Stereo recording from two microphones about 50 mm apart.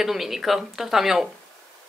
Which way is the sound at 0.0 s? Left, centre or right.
Centre.